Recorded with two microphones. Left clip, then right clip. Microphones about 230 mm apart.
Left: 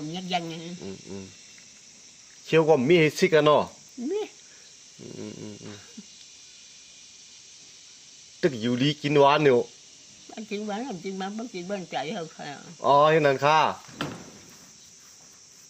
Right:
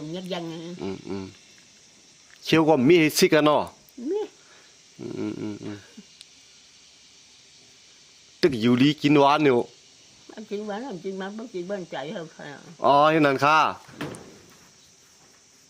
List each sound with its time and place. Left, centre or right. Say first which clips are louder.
0.1 s speech: left 3 dB; centre
0.8 s speech: right 6 dB; right
2.5 s speech: right 1 dB; right
5.1 s speech: right 8 dB; right
8.4 s speech: right 5 dB; right
10.3 s speech: right 1 dB; centre
12.8 s speech: right 1 dB; right